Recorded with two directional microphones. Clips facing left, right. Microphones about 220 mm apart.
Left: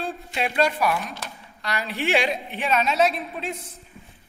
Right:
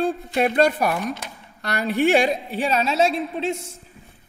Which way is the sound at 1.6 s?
55° right (ahead or behind).